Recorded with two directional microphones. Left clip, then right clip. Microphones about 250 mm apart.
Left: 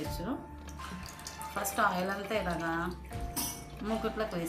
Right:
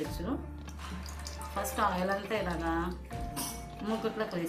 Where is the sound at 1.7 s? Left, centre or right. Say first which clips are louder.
Even; left.